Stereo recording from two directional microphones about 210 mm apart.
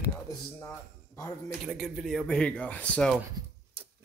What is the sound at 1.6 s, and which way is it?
Speech, centre (ahead or behind).